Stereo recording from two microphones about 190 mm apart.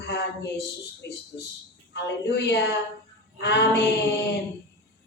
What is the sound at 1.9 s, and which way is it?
A woman's voice, 60° left (ahead or behind).